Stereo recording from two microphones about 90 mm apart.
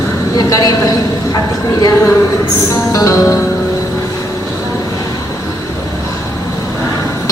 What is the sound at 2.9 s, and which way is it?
Music, 40° left (ahead or behind).